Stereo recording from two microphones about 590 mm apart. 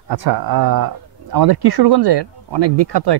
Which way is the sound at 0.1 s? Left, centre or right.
Right.